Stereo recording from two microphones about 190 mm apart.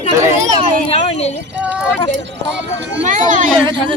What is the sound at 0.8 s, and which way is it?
Speech, 35° left (ahead or behind).